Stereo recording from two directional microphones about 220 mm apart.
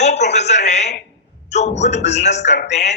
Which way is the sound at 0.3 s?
30° left (ahead or behind).